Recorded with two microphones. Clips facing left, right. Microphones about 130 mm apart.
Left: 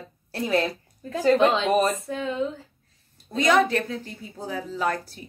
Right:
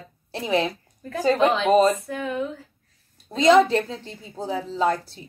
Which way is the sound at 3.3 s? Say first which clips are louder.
Right 4 dB; 25° right (ahead or behind).